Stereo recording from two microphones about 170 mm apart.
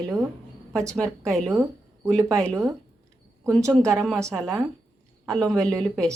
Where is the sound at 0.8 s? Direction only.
5° left (ahead or behind).